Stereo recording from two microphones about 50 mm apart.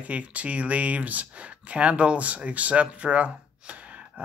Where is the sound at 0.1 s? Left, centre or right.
Right.